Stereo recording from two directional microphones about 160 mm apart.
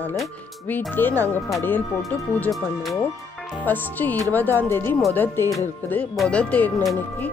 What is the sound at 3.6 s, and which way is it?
A woman's voice, 10° left (ahead or behind).